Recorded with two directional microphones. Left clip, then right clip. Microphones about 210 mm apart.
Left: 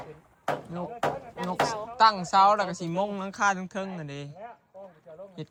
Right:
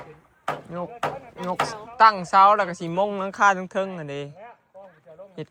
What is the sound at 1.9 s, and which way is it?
A woman's voice, 10° left (ahead or behind).